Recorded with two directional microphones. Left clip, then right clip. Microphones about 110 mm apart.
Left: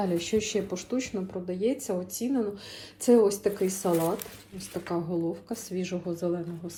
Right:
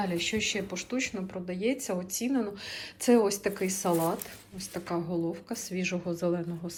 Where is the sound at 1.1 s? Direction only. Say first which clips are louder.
Left 3 dB; 35° left (ahead or behind).